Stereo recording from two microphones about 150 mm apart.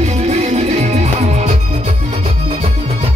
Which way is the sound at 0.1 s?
45° right (ahead or behind).